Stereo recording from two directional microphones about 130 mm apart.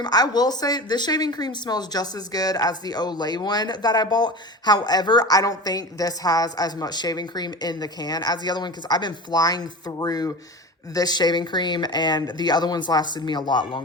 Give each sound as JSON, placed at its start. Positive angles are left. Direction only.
{"t": 0.0, "sound": "speech", "side_deg": 30}